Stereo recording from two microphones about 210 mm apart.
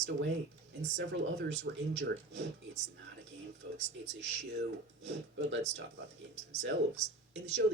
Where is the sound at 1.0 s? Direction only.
55° right (ahead or behind).